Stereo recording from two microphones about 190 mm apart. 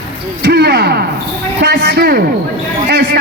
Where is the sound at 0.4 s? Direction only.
60° right (ahead or behind).